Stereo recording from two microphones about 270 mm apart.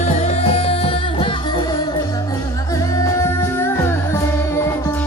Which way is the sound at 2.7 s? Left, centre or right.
Centre.